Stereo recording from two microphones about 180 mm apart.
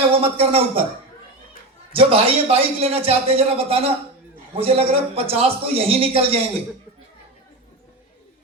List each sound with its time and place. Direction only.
0.1 s a man's voice: 30° right (ahead or behind)
1.9 s a man's voice: 30° right (ahead or behind)